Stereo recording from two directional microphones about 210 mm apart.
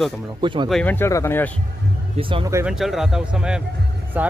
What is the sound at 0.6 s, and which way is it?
Speech, 5° left (ahead or behind).